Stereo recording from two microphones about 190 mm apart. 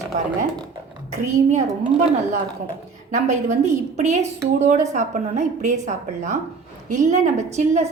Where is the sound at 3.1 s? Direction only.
40° right (ahead or behind).